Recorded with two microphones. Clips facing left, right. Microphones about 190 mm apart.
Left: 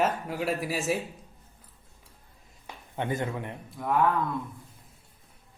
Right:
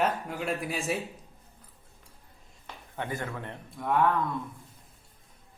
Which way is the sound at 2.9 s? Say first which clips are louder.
Left 4 dB; 20° left (ahead or behind).